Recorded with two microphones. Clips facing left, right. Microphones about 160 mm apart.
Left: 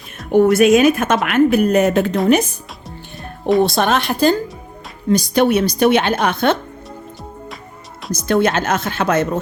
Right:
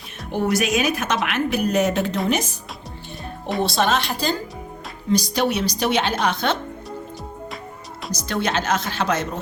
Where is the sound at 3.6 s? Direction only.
55° left (ahead or behind).